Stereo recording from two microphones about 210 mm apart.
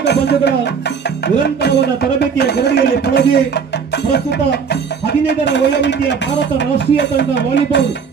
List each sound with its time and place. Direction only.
0.0 s speech: 55° left (ahead or behind)